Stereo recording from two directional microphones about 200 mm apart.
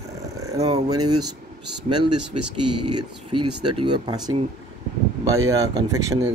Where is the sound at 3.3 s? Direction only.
25° right (ahead or behind).